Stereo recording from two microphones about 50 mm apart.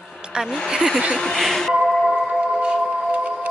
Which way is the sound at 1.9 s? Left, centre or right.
Centre.